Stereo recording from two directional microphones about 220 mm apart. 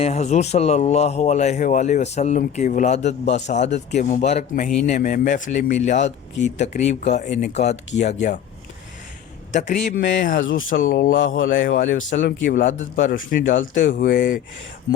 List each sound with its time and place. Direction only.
0.0 s a man's voice: 30° left (ahead or behind)
9.5 s a man's voice: 35° left (ahead or behind)